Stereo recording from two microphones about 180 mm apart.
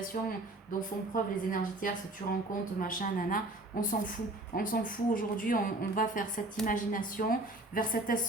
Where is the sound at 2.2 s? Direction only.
30° left (ahead or behind).